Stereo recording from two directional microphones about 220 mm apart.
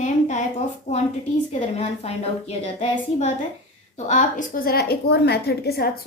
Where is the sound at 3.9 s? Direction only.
30° left (ahead or behind).